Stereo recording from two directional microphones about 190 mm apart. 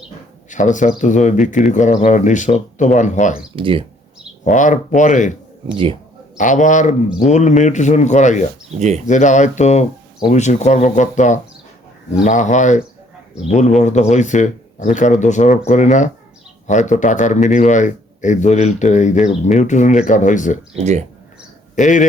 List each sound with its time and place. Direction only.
0.5 s a man's voice: 40° left (ahead or behind)
3.5 s speech: 25° right (ahead or behind)
4.4 s a man's voice: 40° left (ahead or behind)
5.6 s speech: 25° right (ahead or behind)
6.3 s a man's voice: 40° left (ahead or behind)
20.7 s speech: 35° right (ahead or behind)
21.8 s a man's voice: 40° left (ahead or behind)